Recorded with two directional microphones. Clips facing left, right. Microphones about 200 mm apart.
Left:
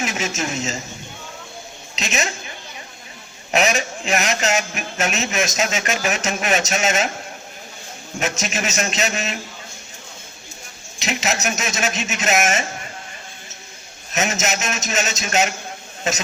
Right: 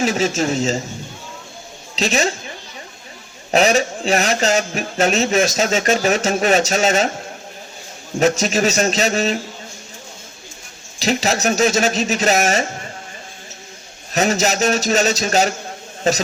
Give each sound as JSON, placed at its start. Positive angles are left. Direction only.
{"t": 0.0, "sound": "a man's voice", "side_deg": -30}
{"t": 2.0, "sound": "a man's voice", "side_deg": -30}
{"t": 3.5, "sound": "a man's voice", "side_deg": -30}
{"t": 8.2, "sound": "a man's voice", "side_deg": -35}
{"t": 11.0, "sound": "a man's voice", "side_deg": -35}
{"t": 14.1, "sound": "a man's voice", "side_deg": -35}